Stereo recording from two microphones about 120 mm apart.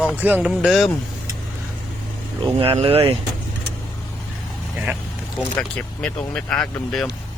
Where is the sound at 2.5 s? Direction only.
50° right (ahead or behind).